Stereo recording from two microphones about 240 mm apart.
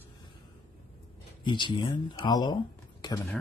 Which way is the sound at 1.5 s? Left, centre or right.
Centre.